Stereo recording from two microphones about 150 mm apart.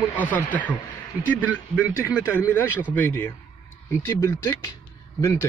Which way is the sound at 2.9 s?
15° left (ahead or behind).